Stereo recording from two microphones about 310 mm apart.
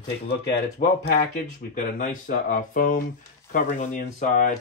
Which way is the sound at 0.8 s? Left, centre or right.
Left.